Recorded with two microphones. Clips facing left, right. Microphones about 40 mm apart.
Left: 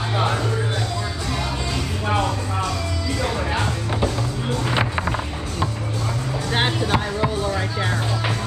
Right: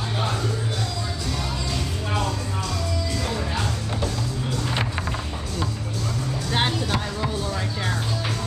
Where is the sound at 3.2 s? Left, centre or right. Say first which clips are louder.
Left 7 dB; left.